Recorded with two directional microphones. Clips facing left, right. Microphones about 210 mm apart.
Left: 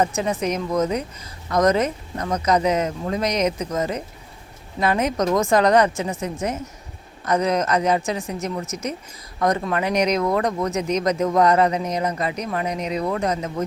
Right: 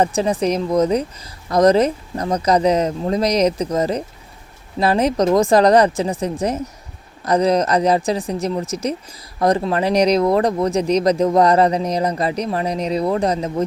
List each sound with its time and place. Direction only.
0.0 s speech: 35° right (ahead or behind)